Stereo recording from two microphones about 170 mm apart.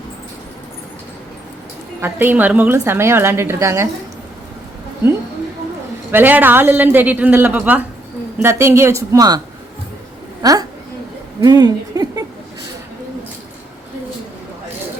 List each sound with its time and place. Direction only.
2.0 s a woman's voice: 10° right (ahead or behind)
6.1 s a woman's voice: 10° right (ahead or behind)
10.4 s a woman's voice: 20° right (ahead or behind)